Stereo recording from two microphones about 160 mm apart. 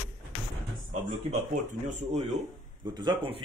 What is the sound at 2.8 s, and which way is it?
Speech, 30° right (ahead or behind).